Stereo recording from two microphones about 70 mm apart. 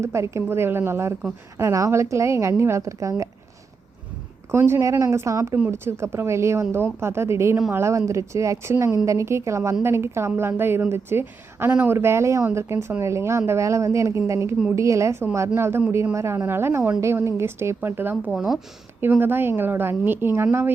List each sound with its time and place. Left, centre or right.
0.0 s a woman's voice: right
4.5 s a woman's voice: right
5.6 s a woman's voice: right
18.3 s speech: centre
18.9 s a woman's voice: right